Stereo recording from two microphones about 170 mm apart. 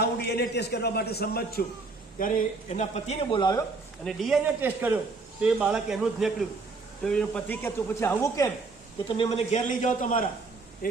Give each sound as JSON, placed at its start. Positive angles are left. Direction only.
{"t": 0.0, "sound": "a man's voice", "side_deg": 75}
{"t": 2.1, "sound": "speech", "side_deg": 55}
{"t": 4.0, "sound": "speech", "side_deg": 0}
{"t": 4.6, "sound": "a man's voice", "side_deg": -10}
{"t": 9.0, "sound": "a man's voice", "side_deg": 35}